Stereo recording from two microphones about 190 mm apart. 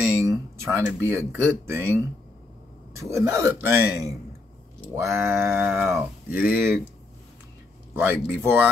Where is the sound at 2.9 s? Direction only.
15° right (ahead or behind).